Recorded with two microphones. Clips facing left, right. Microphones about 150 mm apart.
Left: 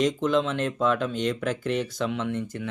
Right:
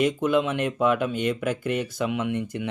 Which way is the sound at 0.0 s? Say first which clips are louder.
Right 1 dB; 10° right (ahead or behind).